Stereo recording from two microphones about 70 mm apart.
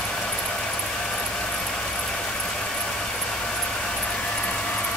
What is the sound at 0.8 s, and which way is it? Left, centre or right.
Vehicle, centre.